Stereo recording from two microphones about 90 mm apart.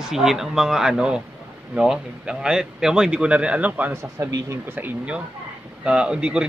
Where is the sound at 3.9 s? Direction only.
30° right (ahead or behind).